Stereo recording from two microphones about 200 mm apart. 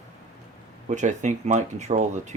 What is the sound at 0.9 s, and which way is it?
Speech, 35° right (ahead or behind).